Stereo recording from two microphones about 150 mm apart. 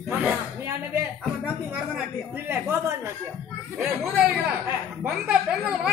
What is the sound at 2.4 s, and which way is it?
Speech, 15° right (ahead or behind).